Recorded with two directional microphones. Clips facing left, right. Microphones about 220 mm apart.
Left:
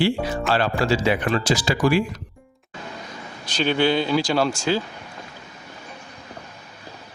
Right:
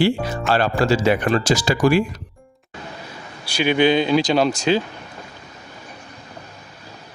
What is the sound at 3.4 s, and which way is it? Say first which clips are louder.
Speech: right 3 dB; 10° right (ahead or behind).